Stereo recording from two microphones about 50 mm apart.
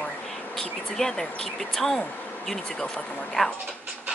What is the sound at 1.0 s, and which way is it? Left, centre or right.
Speech, centre.